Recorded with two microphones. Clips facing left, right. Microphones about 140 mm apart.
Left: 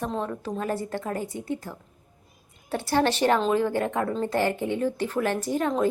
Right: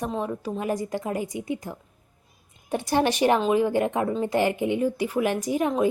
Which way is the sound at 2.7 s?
15° right (ahead or behind).